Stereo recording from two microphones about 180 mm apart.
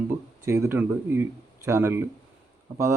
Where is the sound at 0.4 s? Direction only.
15° right (ahead or behind).